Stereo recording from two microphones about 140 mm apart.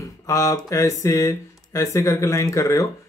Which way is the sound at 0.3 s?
25° left (ahead or behind).